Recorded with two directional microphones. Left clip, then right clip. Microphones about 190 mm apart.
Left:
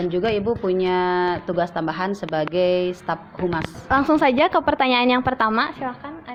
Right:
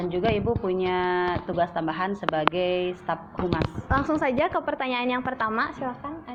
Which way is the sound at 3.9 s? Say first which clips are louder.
Left 8 dB; 35° left (ahead or behind).